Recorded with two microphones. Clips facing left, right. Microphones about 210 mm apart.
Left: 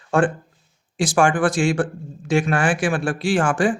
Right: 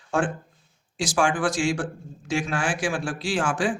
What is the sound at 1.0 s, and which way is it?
Speech, 55° left (ahead or behind).